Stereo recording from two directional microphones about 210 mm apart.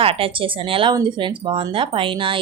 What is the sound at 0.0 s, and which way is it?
Speech, 25° right (ahead or behind).